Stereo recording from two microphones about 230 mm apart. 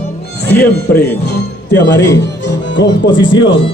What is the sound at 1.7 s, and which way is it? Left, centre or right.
Speech, left.